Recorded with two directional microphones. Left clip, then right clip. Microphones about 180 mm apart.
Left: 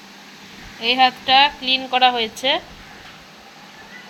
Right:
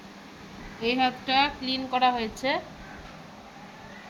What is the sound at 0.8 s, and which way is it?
A woman's voice, 15° left (ahead or behind).